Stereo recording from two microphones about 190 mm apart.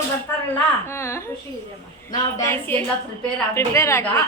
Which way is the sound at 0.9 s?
15° left (ahead or behind).